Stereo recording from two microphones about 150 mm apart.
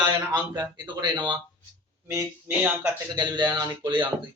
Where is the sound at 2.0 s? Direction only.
15° right (ahead or behind).